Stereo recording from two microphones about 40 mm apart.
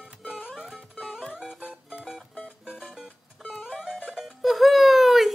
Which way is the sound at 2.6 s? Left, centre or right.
Centre.